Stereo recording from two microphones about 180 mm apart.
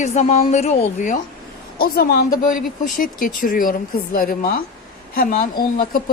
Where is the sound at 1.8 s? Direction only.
60° left (ahead or behind).